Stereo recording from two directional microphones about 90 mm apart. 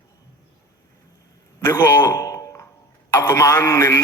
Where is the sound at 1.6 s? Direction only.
30° left (ahead or behind).